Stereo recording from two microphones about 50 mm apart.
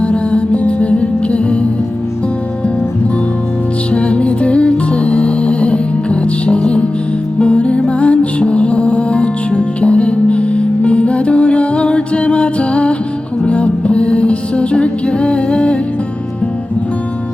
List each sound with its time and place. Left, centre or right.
0.0 s music: left
3.9 s music: left